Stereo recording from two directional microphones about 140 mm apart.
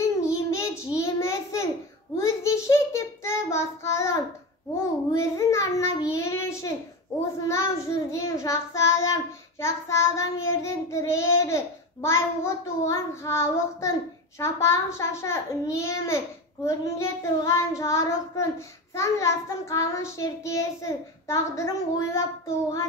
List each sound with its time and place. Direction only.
0.3 s child singing: 20° left (ahead or behind)
6.1 s a child's voice: 20° left (ahead or behind)
7.1 s child singing: 20° left (ahead or behind)